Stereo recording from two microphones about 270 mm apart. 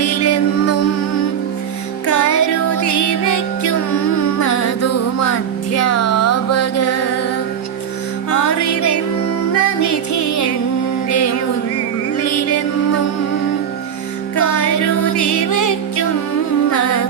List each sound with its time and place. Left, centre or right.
0.0 s music: left
2.0 s music: left
8.3 s music: left
12.1 s music: left
14.4 s music: left
16.7 s humming: left